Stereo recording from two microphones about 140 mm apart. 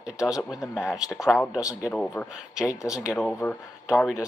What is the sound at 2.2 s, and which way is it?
Speech, 10° left (ahead or behind).